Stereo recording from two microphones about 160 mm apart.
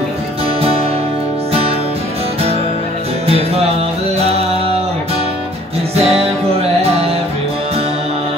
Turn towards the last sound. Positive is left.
turn(degrees=-40)  # may be behind; listen again after turning